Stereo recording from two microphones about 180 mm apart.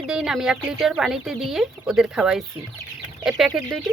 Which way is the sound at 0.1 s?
5° right (ahead or behind).